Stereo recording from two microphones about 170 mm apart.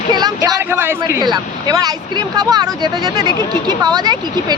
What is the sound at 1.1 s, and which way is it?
Speech, 25° right (ahead or behind).